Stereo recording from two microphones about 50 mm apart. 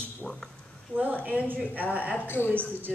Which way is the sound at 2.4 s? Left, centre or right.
Right.